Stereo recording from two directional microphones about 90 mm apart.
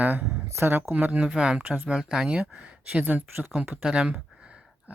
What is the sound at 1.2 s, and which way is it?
Speech, 10° right (ahead or behind).